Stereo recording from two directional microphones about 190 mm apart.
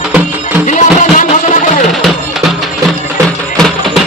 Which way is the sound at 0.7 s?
40° left (ahead or behind).